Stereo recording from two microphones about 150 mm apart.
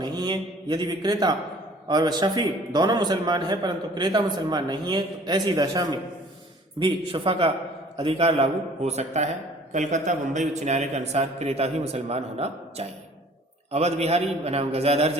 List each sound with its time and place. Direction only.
0.0 s a man's voice: 30° right (ahead or behind)
6.7 s a man's voice: 35° right (ahead or behind)